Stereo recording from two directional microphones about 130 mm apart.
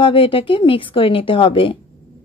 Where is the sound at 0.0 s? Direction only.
40° left (ahead or behind).